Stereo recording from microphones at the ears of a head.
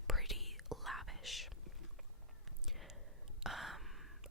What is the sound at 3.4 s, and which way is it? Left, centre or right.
Gasp, centre.